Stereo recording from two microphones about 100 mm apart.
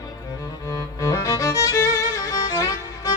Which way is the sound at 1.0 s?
35° left (ahead or behind).